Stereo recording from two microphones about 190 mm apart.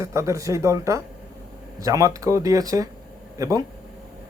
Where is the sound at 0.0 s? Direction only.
15° right (ahead or behind).